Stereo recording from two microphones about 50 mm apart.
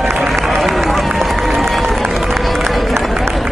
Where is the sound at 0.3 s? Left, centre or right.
Centre.